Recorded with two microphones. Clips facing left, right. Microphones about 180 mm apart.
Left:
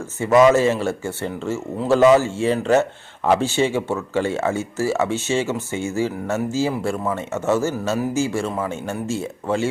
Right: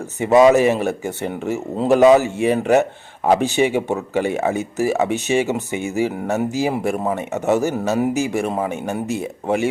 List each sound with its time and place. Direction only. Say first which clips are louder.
0.2 s speech: right 2 dB; 20° right (ahead or behind)